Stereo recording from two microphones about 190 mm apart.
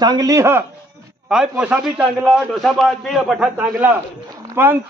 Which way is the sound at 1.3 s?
5° right (ahead or behind).